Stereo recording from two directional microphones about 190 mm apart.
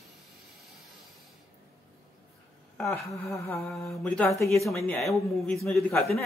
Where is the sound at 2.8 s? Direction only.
Centre (ahead or behind).